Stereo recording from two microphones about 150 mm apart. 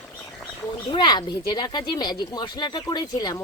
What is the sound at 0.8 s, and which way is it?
Speech, 30° left (ahead or behind).